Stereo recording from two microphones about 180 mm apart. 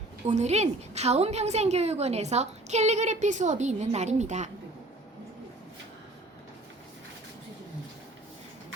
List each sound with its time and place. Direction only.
0.3 s a woman's voice: 40° right (ahead or behind)